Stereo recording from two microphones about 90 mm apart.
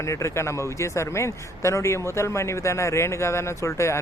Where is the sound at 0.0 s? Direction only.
35° left (ahead or behind).